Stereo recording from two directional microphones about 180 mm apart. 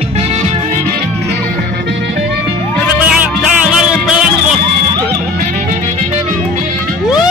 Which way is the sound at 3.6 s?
5° right (ahead or behind).